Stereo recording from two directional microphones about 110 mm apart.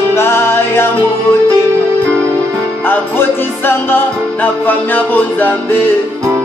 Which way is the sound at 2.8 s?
20° left (ahead or behind).